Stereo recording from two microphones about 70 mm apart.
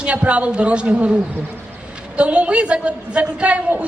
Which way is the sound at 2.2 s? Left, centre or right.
Centre.